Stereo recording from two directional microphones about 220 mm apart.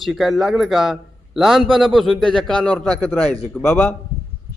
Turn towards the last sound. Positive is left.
turn(degrees=10)  # may be behind; listen again after turning